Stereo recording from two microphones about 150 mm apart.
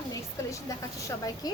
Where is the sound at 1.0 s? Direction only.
25° left (ahead or behind).